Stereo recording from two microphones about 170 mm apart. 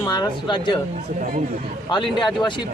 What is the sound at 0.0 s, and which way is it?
Speech, 25° left (ahead or behind).